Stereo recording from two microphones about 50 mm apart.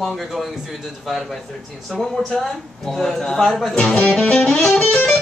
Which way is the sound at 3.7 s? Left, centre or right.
Centre.